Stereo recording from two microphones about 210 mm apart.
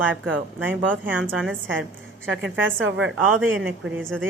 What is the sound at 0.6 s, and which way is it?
Speech, 10° right (ahead or behind).